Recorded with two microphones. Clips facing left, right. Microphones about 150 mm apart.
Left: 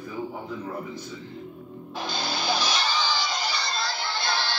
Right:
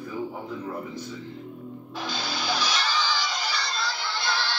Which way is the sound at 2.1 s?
30° left (ahead or behind).